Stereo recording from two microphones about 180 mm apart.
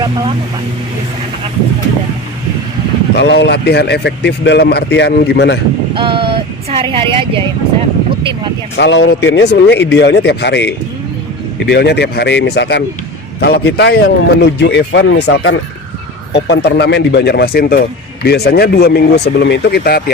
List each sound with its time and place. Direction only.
3.2 s a man's voice: 70° left (ahead or behind)
5.9 s speech: 30° right (ahead or behind)
8.7 s a man's voice: 80° left
16.3 s speech: 70° left (ahead or behind)